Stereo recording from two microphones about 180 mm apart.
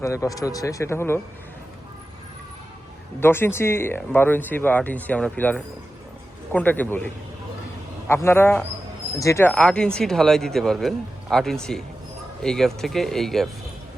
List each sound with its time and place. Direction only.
0.0 s speech: 15° left (ahead or behind)
3.2 s speech: 10° left (ahead or behind)
9.5 s a man's voice: 5° left (ahead or behind)